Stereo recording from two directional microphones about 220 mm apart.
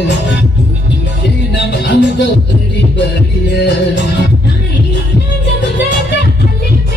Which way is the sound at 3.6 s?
50° left (ahead or behind).